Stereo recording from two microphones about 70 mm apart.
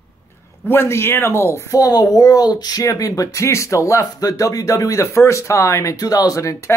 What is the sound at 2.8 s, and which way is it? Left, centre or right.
Speech, left.